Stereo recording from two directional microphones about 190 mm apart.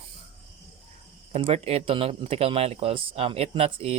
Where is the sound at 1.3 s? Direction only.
30° right (ahead or behind).